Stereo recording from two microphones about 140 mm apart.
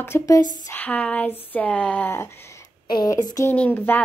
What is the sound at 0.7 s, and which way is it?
Speech, 10° left (ahead or behind).